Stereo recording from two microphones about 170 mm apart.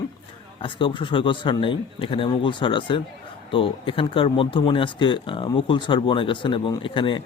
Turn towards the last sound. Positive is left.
turn(degrees=30)  # may be behind; listen again after turning